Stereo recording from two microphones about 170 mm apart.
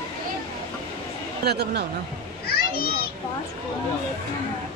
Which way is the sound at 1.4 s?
70° right (ahead or behind).